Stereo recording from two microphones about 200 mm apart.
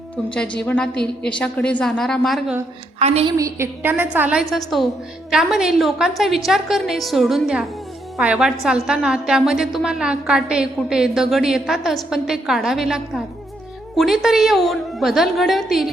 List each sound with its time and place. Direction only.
0.3 s a woman's voice: 5° left (ahead or behind)
3.0 s a woman's voice: 30° right (ahead or behind)
3.3 s a woman's voice: 15° right (ahead or behind)